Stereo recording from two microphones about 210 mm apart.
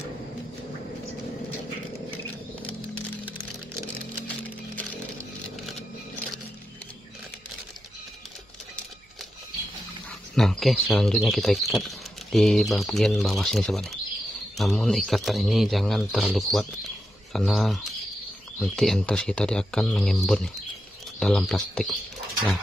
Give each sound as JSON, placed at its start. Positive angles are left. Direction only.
{"t": 2.6, "sound": "a sound", "side_deg": 5}
{"t": 4.3, "sound": "music", "side_deg": 5}
{"t": 10.3, "sound": "speech", "side_deg": 0}